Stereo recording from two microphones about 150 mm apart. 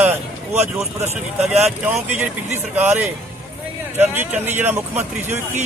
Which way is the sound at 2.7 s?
10° right (ahead or behind).